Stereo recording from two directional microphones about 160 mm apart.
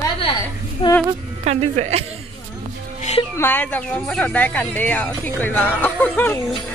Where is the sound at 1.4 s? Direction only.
45° right (ahead or behind).